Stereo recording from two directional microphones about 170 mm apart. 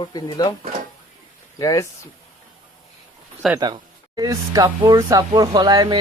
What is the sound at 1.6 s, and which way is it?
Speech, 20° left (ahead or behind).